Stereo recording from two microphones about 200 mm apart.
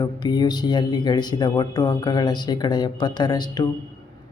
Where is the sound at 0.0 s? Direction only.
20° left (ahead or behind).